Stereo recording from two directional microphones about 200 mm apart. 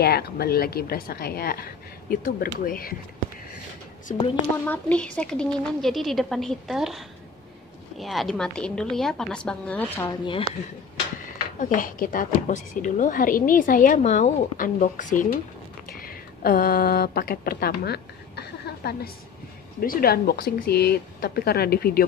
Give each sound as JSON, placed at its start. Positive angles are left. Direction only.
{"t": 0.0, "sound": "a woman's voice", "side_deg": 50}
{"t": 4.1, "sound": "speech", "side_deg": 35}
{"t": 4.6, "sound": "a woman's voice", "side_deg": 5}
{"t": 11.7, "sound": "a woman's voice", "side_deg": 45}